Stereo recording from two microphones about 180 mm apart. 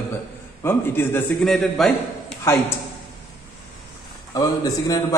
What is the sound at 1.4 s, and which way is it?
Speech, centre (ahead or behind).